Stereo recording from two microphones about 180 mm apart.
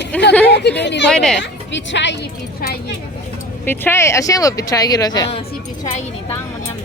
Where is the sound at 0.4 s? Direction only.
70° left (ahead or behind).